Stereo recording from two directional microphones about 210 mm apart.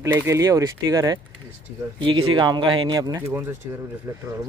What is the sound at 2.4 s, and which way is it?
Speech, 25° right (ahead or behind).